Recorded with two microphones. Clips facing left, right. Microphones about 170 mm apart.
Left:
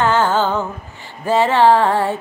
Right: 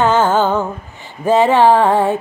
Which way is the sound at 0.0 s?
20° right (ahead or behind).